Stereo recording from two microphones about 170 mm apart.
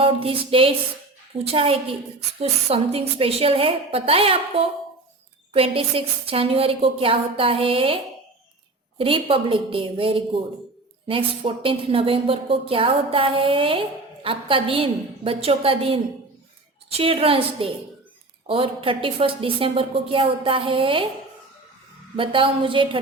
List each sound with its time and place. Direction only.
0.0 s a woman's voice: 30° right (ahead or behind)
9.0 s a woman's voice: 30° right (ahead or behind)
22.1 s a woman's voice: 30° right (ahead or behind)